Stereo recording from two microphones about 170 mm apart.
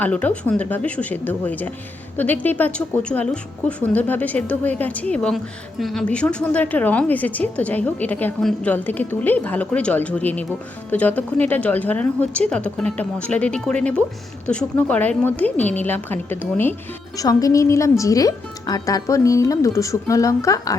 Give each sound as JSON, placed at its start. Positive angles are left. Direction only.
{"t": 0.0, "sound": "a woman's voice", "side_deg": 10}